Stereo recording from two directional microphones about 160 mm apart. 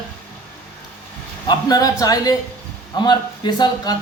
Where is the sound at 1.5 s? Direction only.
25° left (ahead or behind).